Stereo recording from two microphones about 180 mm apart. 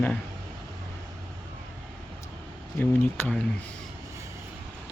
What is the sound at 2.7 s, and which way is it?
Speech, 10° left (ahead or behind).